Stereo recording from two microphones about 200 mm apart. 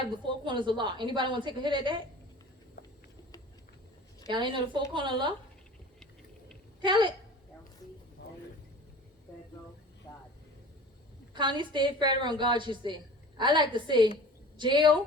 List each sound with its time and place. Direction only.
0.4 s a woman's voice: 25° right (ahead or behind)
2.8 s a sound: 50° left (ahead or behind)
4.3 s a woman's voice: 25° right (ahead or behind)
6.8 s a woman's voice: 25° right (ahead or behind)
11.3 s a woman's voice: 25° right (ahead or behind)